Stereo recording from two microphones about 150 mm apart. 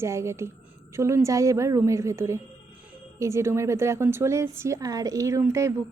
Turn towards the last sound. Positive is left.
turn(degrees=-20)  # may be behind; listen again after turning